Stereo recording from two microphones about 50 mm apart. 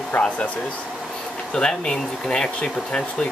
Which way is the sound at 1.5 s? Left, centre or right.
Centre.